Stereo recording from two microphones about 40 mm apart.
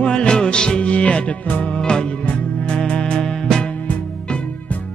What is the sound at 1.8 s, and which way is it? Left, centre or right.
Music, centre.